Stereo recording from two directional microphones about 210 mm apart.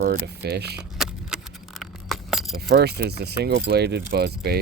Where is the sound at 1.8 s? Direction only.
Centre (ahead or behind).